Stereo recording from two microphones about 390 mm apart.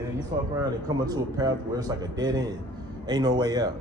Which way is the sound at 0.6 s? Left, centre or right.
Centre.